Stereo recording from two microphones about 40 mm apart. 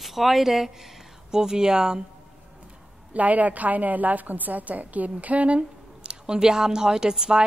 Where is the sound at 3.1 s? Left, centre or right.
Right; by 7.4 s centre.